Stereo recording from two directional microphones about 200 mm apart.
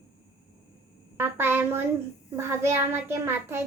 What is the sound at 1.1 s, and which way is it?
A woman's voice, 10° right (ahead or behind).